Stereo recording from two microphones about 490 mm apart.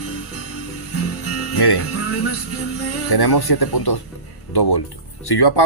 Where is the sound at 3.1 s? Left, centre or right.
Left.